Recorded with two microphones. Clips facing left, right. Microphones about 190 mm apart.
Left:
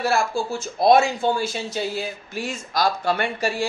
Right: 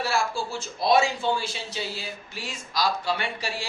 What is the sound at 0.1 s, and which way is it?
Speech, 50° left (ahead or behind).